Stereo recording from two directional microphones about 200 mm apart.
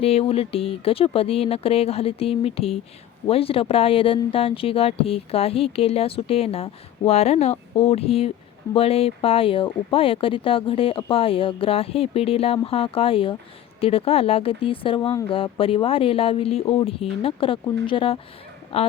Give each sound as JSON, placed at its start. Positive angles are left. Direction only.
{"t": 0.0, "sound": "speech", "side_deg": 30}